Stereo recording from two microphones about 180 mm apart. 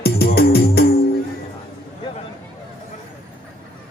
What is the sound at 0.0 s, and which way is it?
Music, 60° left (ahead or behind).